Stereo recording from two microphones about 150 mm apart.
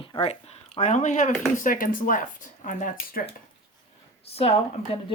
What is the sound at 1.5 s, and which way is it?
Speech, 65° left (ahead or behind).